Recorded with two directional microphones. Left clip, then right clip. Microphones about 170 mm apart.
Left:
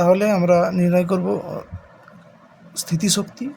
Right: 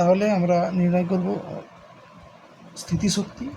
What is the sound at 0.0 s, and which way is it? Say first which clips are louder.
Speech: left 3 dB; 35° left (ahead or behind).